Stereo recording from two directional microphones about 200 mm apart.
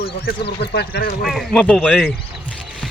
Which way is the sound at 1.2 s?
Centre (ahead or behind).